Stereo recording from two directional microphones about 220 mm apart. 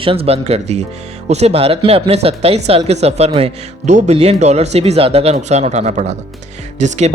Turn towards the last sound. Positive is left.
turn(degrees=-30)  # may be behind; listen again after turning